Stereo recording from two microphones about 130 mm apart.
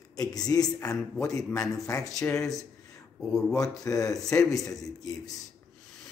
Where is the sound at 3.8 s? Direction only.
25° left (ahead or behind).